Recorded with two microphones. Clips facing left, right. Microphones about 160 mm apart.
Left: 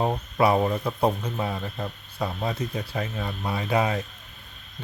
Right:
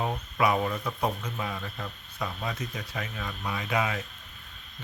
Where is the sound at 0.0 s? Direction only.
35° left (ahead or behind).